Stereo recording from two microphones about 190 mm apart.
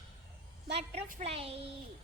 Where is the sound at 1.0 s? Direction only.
45° right (ahead or behind).